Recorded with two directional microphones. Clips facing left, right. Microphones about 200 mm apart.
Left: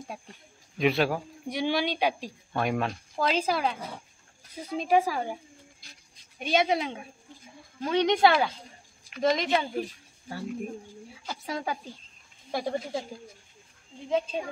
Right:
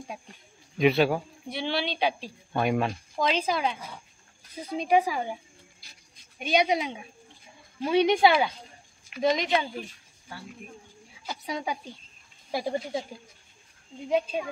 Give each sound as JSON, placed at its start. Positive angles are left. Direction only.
{"t": 0.7, "sound": "speech", "side_deg": 0}
{"t": 1.5, "sound": "a woman's voice", "side_deg": 10}
{"t": 2.5, "sound": "speech", "side_deg": 0}
{"t": 4.7, "sound": "speech", "side_deg": 0}
{"t": 9.8, "sound": "speech", "side_deg": 40}
{"t": 11.2, "sound": "speech", "side_deg": 0}
{"t": 14.0, "sound": "speech", "side_deg": -15}